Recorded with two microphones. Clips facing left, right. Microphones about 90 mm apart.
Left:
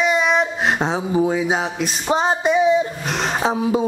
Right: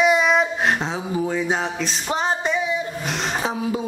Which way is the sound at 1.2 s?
15° left (ahead or behind).